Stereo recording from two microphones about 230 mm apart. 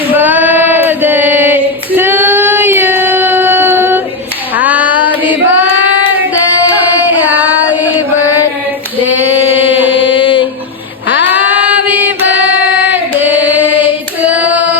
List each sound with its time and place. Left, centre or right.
0.1 s female singing: centre
6.7 s carnatic music: centre
7.7 s chant: centre
9.0 s a sound: left
9.8 s mantra: left
10.2 s a sound: left
11.3 s music: centre
12.9 s singing: centre